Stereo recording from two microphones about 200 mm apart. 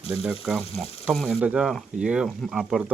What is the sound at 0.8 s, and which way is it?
Speech, 30° left (ahead or behind).